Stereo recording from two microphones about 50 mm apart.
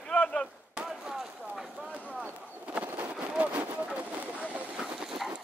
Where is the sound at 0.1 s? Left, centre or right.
Centre.